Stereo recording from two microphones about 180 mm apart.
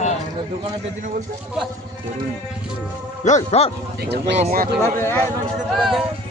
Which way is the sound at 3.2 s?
40° left (ahead or behind).